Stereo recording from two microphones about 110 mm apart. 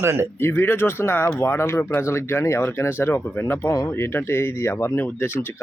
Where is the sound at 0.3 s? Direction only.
20° left (ahead or behind).